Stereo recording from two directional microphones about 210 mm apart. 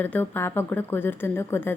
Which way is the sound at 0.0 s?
10° left (ahead or behind).